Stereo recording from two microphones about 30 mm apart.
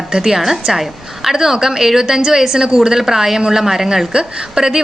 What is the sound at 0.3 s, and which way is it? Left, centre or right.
A woman's voice, centre.